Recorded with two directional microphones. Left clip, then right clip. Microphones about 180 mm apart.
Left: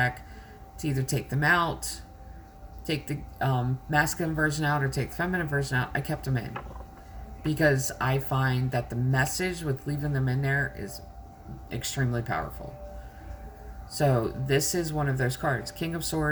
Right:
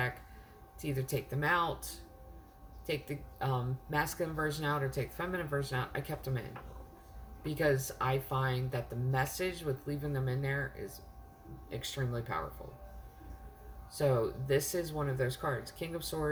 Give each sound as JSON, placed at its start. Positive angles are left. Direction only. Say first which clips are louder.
{"t": 0.8, "sound": "speech", "louder": "left 5 dB", "side_deg": -20}
{"t": 7.4, "sound": "speech", "louder": "left 7 dB", "side_deg": -20}
{"t": 14.5, "sound": "speech", "louder": "left 6 dB", "side_deg": -20}